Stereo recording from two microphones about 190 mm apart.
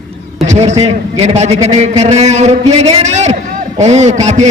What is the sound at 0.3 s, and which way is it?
A man's voice, 35° right (ahead or behind).